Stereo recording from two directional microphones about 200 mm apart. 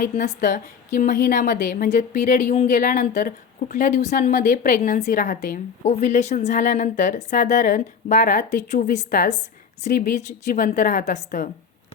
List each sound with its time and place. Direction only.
0.2 s a woman's voice: 40° left (ahead or behind)